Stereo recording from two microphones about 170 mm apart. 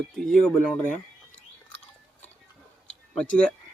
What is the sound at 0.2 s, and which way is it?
Speech, 5° left (ahead or behind).